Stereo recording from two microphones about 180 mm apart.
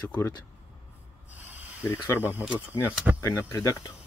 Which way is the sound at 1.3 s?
10° right (ahead or behind).